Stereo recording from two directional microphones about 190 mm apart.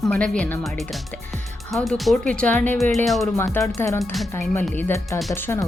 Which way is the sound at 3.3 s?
15° left (ahead or behind).